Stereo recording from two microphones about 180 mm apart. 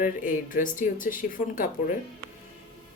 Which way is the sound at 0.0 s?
50° left (ahead or behind).